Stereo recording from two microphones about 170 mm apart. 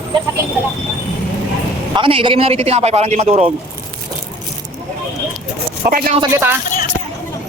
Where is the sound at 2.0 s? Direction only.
30° right (ahead or behind).